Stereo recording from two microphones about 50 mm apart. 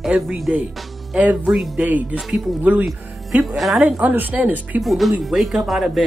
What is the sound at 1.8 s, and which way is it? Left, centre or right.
Speech, right.